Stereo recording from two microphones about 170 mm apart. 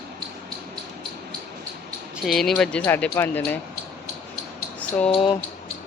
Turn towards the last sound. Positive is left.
turn(degrees=30)  # may be behind; listen again after turning